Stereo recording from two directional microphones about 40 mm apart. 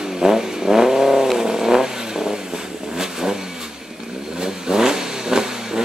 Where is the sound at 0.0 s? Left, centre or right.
Centre.